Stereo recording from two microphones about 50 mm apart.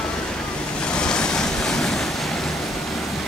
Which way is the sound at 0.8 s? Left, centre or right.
Centre.